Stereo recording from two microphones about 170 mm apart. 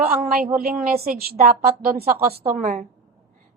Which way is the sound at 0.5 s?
60° right (ahead or behind).